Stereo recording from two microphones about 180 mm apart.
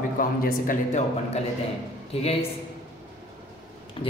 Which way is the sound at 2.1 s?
35° left (ahead or behind).